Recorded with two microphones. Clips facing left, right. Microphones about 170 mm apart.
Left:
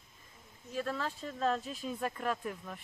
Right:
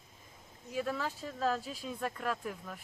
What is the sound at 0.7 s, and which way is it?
Speech, 10° right (ahead or behind).